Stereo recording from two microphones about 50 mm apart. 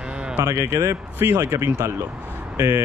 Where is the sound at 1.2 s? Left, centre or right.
Right.